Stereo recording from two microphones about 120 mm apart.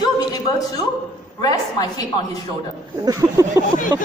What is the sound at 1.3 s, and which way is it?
Speech, 30° left (ahead or behind).